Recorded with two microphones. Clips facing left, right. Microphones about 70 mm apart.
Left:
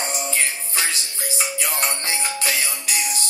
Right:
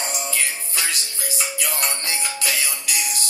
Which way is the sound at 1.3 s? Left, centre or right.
Left.